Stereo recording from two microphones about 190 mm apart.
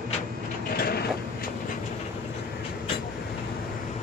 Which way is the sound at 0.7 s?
55° left (ahead or behind).